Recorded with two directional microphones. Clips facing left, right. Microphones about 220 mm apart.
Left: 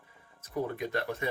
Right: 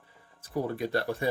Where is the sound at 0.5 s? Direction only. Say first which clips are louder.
Right 3 dB; 35° right (ahead or behind).